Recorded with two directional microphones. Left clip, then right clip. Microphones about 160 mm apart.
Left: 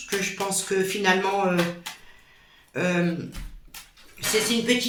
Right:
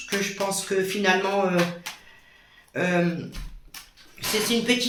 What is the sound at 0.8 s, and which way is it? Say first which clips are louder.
Speech: even; 10° right (ahead or behind).